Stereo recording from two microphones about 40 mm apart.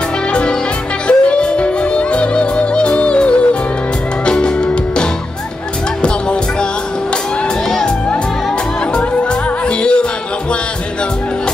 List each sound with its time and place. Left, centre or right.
0.3 s music: left
9.7 s music: left